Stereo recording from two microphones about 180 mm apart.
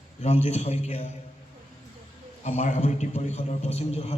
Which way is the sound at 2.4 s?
45° left (ahead or behind).